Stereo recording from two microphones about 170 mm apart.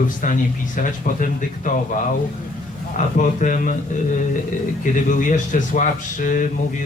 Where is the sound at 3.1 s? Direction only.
50° left (ahead or behind).